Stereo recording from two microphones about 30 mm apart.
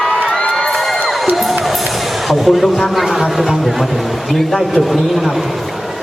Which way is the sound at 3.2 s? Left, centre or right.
Centre.